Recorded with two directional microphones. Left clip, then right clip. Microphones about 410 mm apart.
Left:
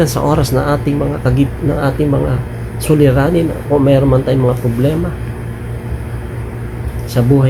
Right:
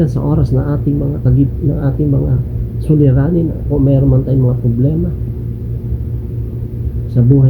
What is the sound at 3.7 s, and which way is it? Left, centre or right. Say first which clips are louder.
Speech: left 5 dB; left.